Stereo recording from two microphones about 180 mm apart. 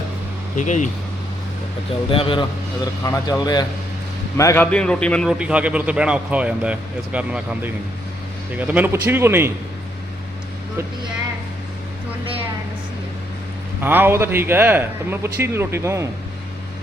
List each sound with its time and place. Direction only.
0.5 s speech: 45° left (ahead or behind)
2.0 s a man's voice: 30° left (ahead or behind); by 9.5 s 15° right (ahead or behind)
13.8 s a man's voice: 10° right (ahead or behind)